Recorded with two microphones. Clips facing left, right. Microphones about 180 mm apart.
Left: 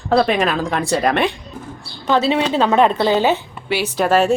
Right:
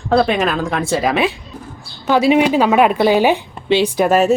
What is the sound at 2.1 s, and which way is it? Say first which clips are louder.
A woman's voice: right 4 dB; 10° right (ahead or behind).